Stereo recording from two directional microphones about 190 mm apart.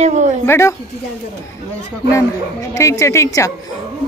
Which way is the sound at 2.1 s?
15° left (ahead or behind).